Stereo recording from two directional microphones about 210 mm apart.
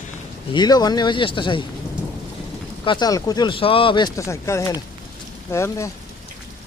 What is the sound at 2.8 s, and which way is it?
Speech, 20° left (ahead or behind).